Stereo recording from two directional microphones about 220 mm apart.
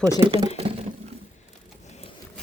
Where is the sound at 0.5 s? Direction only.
25° right (ahead or behind).